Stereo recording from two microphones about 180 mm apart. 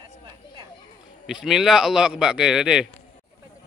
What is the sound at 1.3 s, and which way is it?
Speech, centre (ahead or behind).